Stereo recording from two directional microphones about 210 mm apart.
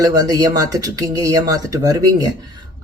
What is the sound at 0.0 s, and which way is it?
Speech, 15° right (ahead or behind).